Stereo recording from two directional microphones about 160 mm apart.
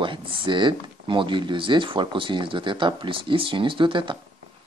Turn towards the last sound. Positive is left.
turn(degrees=-30)  # may be behind; listen again after turning